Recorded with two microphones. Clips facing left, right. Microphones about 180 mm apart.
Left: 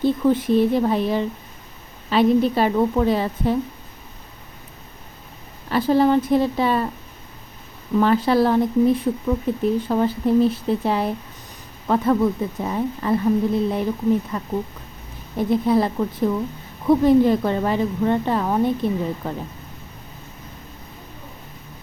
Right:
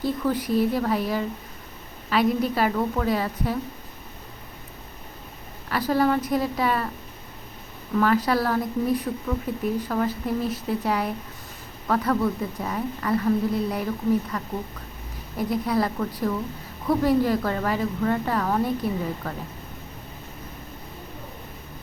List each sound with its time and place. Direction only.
0.0 s a woman's voice: 25° left (ahead or behind)
5.7 s a woman's voice: 25° left (ahead or behind)
7.9 s a woman's voice: 25° left (ahead or behind)